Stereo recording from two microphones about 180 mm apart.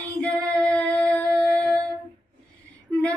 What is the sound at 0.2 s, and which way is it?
Child singing, 5° left (ahead or behind).